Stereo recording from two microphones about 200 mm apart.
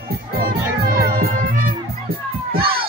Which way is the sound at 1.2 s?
45° right (ahead or behind).